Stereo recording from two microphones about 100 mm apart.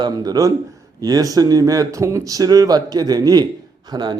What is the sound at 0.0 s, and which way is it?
Speech, 40° right (ahead or behind).